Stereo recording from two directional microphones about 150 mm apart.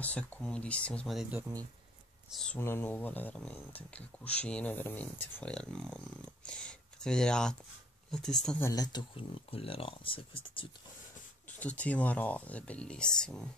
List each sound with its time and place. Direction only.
0.0 s speech: 10° left (ahead or behind)
2.3 s speech: 5° left (ahead or behind)
8.6 s speech: 25° left (ahead or behind)
11.4 s speech: 10° left (ahead or behind)